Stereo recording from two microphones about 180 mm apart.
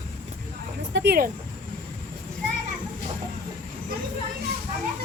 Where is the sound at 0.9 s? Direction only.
65° right (ahead or behind).